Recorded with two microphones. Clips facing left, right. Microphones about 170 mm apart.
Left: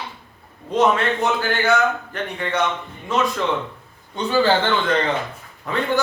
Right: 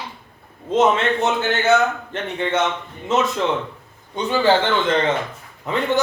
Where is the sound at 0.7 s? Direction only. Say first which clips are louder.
Right 1 dB; 25° right (ahead or behind).